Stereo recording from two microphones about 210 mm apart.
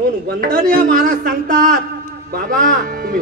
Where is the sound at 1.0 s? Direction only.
40° right (ahead or behind).